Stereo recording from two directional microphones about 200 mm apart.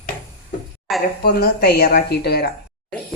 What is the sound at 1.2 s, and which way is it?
Speech, 50° left (ahead or behind).